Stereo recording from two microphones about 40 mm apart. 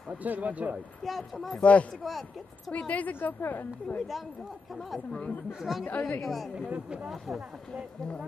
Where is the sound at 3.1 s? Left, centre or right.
Left.